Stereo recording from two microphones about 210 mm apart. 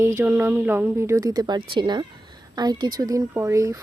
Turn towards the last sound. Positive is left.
turn(degrees=-15)  # may be behind; listen again after turning